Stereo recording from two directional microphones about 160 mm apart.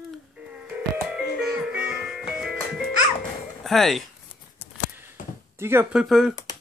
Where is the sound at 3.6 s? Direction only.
Centre (ahead or behind).